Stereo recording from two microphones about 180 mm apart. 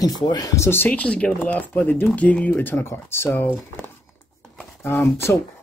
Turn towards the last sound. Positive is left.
turn(degrees=15)  # may be behind; listen again after turning